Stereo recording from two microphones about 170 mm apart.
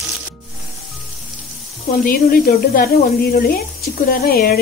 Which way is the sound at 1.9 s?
60° left (ahead or behind).